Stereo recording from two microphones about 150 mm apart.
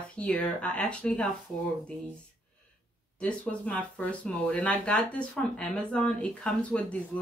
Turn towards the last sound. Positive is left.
turn(degrees=5)  # may be behind; listen again after turning